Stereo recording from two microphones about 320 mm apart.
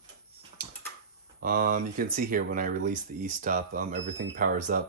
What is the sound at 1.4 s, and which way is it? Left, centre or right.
Speech, right.